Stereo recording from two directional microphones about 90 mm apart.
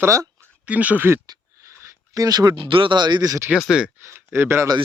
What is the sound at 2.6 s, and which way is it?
Speech, 75° right (ahead or behind).